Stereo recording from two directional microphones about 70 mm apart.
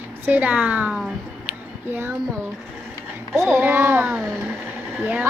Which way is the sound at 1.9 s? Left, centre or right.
Right.